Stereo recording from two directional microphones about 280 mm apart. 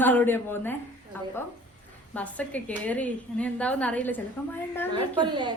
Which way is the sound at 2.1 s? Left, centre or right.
Centre.